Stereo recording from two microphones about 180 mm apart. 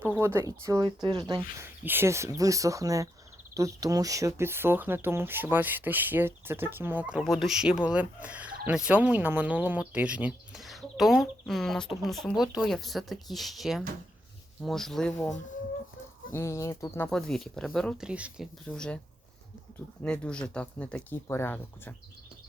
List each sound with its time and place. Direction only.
0.0 s speech: 10° right (ahead or behind)
1.8 s speech: 10° right (ahead or behind)
16.3 s speech: 15° left (ahead or behind)
17.1 s speech: 5° left (ahead or behind)
20.0 s speech: 5° left (ahead or behind)